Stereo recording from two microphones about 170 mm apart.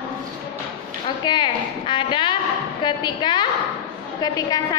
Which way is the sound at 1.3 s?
30° left (ahead or behind).